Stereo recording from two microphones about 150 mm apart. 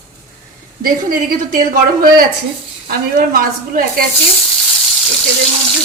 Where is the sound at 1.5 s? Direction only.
70° right (ahead or behind).